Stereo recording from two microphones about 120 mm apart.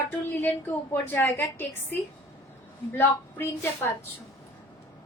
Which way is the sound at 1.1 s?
20° left (ahead or behind).